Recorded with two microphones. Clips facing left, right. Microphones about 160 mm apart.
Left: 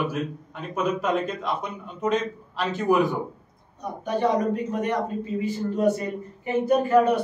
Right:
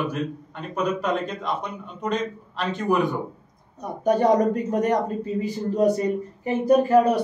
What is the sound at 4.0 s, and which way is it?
A woman's voice, 45° right (ahead or behind).